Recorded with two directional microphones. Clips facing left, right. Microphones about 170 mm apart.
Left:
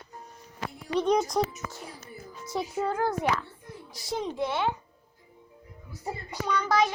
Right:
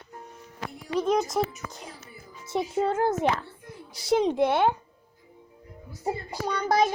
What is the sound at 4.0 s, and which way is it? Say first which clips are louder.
Speech: right 8 dB; 75° right (ahead or behind).